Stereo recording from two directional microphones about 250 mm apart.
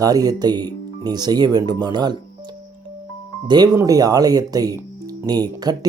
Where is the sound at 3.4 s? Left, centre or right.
Centre.